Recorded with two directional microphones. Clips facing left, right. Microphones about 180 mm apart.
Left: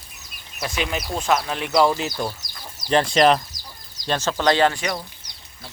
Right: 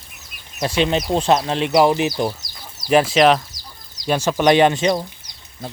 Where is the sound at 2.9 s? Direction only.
5° right (ahead or behind).